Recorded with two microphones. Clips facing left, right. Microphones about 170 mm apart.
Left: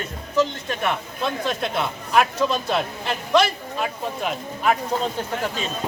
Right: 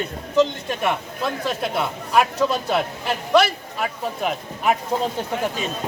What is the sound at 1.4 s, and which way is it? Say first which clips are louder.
A man's voice: right 2 dB; 5° right (ahead or behind).